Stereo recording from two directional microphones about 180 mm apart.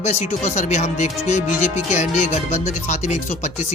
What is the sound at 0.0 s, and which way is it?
Speech, 40° left (ahead or behind).